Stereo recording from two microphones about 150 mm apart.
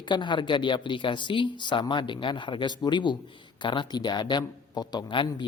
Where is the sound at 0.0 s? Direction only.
30° left (ahead or behind).